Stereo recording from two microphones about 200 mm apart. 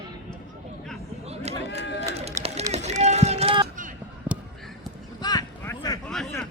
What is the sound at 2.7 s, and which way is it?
Run, 35° right (ahead or behind).